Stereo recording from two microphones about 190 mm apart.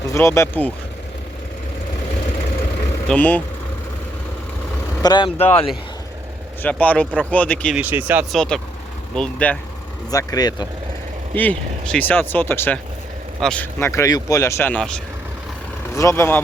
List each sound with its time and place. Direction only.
0.1 s speech: 15° left (ahead or behind)
3.1 s speech: 10° left (ahead or behind)
5.0 s speech: 25° left (ahead or behind)
6.6 s speech: 10° left (ahead or behind)
7.8 s speech: 10° right (ahead or behind)
8.4 s speech: 5° left (ahead or behind)
10.1 s speech: 20° left (ahead or behind)
11.3 s speech: 10° left (ahead or behind)
16.0 s speech: 15° left (ahead or behind)